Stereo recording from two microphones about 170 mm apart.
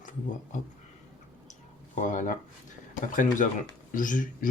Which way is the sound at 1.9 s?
45° left (ahead or behind).